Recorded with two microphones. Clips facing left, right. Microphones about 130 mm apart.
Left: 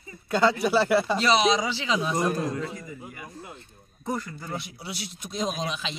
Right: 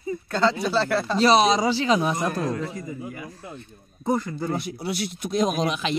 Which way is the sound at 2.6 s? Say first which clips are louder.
Right 4 dB; 35° right (ahead or behind).